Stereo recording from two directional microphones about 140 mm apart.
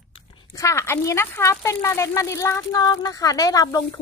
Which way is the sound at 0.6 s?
20° left (ahead or behind).